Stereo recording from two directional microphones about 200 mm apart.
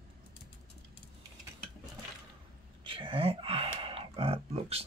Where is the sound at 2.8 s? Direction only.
25° right (ahead or behind).